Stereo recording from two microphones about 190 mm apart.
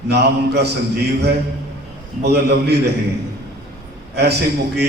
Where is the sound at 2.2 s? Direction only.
60° right (ahead or behind).